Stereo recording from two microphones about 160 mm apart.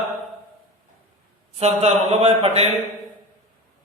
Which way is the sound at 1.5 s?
40° right (ahead or behind).